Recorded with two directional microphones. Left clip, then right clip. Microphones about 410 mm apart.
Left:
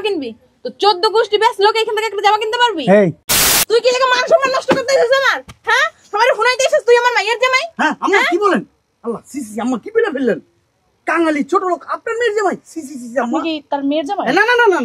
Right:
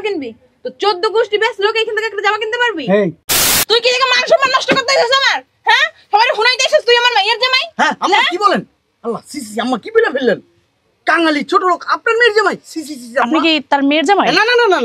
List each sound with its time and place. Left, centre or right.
0.0 s a woman's voice: centre
3.6 s speech: right
7.7 s speech: centre; by 12.5 s right
13.2 s a woman's voice: right
14.2 s speech: right